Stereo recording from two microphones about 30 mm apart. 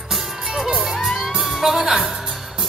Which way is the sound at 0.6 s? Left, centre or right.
Centre.